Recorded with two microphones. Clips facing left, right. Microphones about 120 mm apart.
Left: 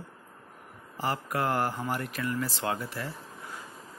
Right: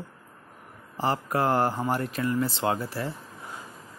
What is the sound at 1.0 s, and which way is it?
Speech, 30° right (ahead or behind).